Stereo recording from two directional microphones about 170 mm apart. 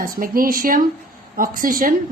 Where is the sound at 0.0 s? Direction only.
55° right (ahead or behind).